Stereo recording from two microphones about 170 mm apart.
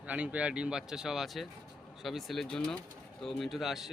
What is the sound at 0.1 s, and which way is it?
Speech, 10° right (ahead or behind).